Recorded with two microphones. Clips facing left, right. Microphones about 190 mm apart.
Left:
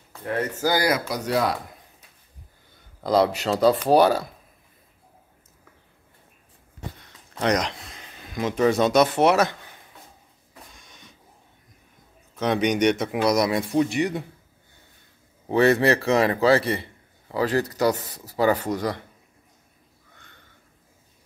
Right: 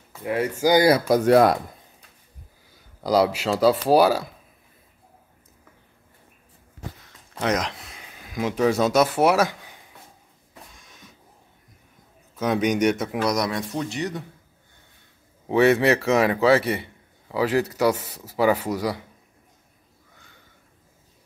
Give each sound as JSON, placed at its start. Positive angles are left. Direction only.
{"t": 0.1, "sound": "speech", "side_deg": -10}
{"t": 1.0, "sound": "speech", "side_deg": -50}
{"t": 3.0, "sound": "speech", "side_deg": -10}
{"t": 7.0, "sound": "speech", "side_deg": 0}
{"t": 10.7, "sound": "a sound", "side_deg": 0}
{"t": 12.4, "sound": "speech", "side_deg": -5}
{"t": 15.4, "sound": "speech", "side_deg": -5}